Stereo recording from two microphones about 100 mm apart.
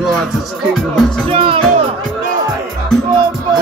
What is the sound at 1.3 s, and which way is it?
Speech, 70° right (ahead or behind).